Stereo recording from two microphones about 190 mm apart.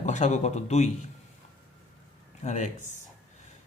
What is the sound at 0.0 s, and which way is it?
Speech, 40° left (ahead or behind).